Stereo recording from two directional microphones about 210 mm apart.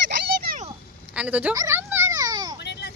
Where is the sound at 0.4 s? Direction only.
40° right (ahead or behind).